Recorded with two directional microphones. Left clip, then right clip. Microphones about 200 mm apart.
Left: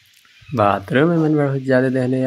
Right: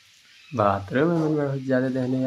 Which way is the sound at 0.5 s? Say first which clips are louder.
Left 6 dB; 20° left (ahead or behind).